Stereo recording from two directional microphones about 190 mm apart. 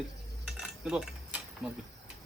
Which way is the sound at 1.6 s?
Centre (ahead or behind).